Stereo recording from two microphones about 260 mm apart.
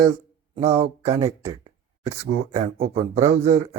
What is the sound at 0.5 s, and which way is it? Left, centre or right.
Speech, right.